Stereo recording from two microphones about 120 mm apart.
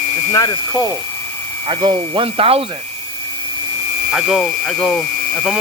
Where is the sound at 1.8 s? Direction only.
45° right (ahead or behind).